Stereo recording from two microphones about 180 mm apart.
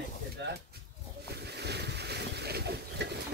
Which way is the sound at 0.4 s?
75° right (ahead or behind).